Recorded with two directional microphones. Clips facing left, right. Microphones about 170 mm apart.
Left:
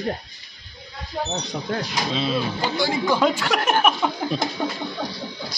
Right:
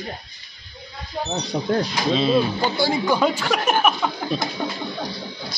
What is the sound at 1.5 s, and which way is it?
Speech, 20° right (ahead or behind).